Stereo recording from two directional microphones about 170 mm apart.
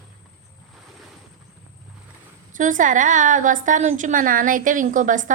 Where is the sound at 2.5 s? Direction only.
50° right (ahead or behind).